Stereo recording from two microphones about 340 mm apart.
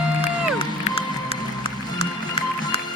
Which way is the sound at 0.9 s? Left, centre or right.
Centre.